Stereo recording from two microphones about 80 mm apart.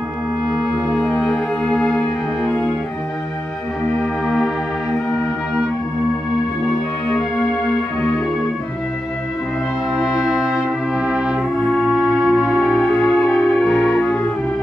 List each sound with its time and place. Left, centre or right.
0.8 s music: centre
2.4 s music: left
7.1 s music: centre
9.9 s brass instrument: centre
11.8 s music: centre